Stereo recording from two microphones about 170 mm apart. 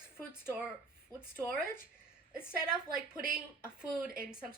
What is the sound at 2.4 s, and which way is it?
Speech, 5° right (ahead or behind).